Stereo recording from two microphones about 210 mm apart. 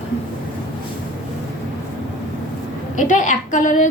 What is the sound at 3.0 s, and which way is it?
Speech, 35° left (ahead or behind).